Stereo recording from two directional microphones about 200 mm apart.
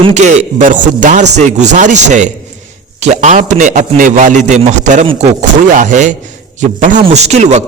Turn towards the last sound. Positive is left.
turn(degrees=-35)  # may be behind; listen again after turning